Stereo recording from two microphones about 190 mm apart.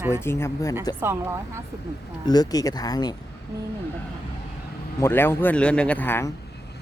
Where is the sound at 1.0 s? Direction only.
15° right (ahead or behind).